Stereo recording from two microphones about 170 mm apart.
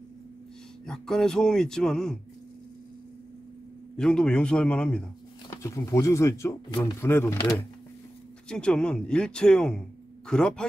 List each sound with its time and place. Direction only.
0.8 s speech: 5° left (ahead or behind)
3.9 s speech: 5° left (ahead or behind)